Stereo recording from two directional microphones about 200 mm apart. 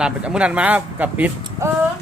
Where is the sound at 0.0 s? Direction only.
5° right (ahead or behind).